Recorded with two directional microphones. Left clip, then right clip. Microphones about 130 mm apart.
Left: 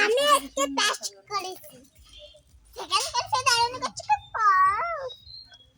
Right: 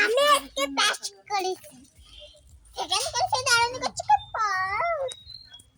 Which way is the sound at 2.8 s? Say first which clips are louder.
Right 1 dB; 25° left (ahead or behind).